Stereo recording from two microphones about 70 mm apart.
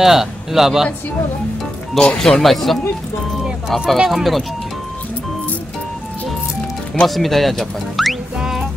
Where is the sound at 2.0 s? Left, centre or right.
Centre.